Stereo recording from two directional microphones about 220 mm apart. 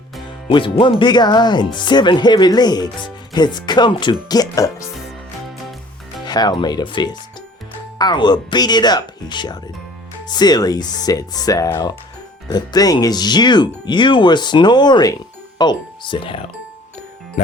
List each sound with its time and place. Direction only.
0.5 s speech: 25° left (ahead or behind)
6.2 s speech: 20° left (ahead or behind)
17.4 s music: 30° left (ahead or behind)